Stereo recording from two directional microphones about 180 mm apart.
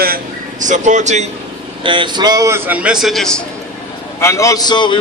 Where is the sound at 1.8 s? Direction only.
25° right (ahead or behind); by 3.4 s centre (ahead or behind).